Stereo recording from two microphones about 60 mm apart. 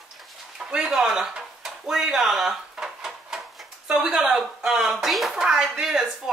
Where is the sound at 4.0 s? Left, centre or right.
Centre.